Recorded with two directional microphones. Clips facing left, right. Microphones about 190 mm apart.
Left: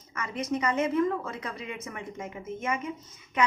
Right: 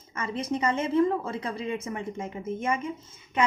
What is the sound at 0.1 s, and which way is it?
A woman's voice, 30° right (ahead or behind).